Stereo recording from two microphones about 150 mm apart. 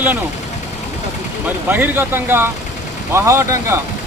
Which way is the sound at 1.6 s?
10° right (ahead or behind).